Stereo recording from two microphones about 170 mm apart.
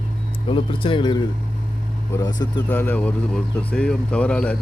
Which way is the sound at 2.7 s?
10° left (ahead or behind).